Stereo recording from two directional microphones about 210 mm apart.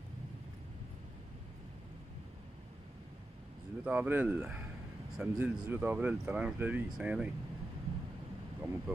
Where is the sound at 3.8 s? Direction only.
5° right (ahead or behind).